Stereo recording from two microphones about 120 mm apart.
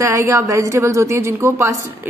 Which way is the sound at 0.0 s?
20° right (ahead or behind).